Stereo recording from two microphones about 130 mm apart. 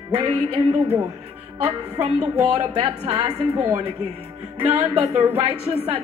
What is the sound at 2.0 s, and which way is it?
Speech, 55° right (ahead or behind).